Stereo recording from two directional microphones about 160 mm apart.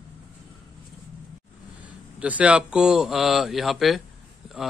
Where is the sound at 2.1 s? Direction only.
10° right (ahead or behind).